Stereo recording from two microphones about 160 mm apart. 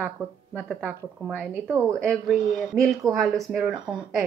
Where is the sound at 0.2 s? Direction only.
5° right (ahead or behind).